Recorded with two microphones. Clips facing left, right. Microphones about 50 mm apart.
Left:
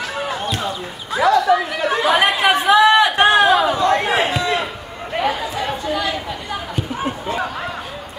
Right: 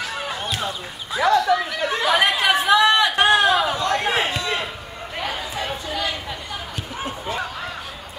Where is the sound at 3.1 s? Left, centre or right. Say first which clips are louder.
Left 4 dB; left.